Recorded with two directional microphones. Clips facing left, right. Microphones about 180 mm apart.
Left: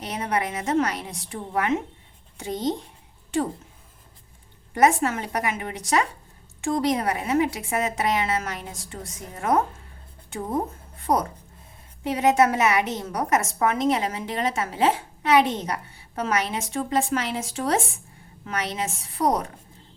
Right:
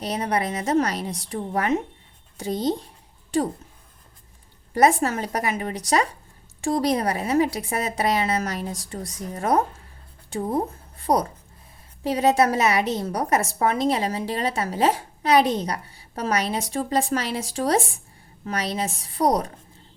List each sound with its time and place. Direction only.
0.0 s a woman's voice: 35° right (ahead or behind)
4.7 s a woman's voice: 35° right (ahead or behind)